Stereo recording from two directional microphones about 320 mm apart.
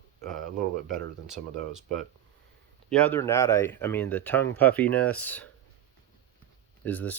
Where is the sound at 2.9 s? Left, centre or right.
Centre.